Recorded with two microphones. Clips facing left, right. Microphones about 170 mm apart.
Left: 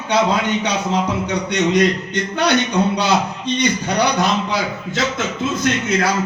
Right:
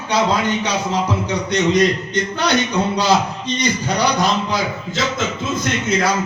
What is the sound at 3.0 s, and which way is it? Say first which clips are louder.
A man's voice: right 1 dB; 60° left (ahead or behind).